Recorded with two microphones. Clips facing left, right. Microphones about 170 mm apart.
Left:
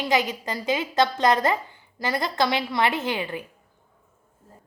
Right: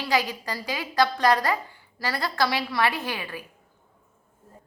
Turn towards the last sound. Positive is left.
turn(degrees=25)  # may be behind; listen again after turning